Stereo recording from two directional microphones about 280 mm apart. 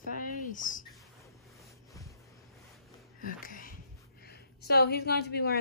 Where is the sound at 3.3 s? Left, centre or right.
Left.